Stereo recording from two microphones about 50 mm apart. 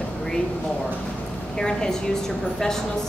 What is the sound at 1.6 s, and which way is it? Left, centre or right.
Speech, centre.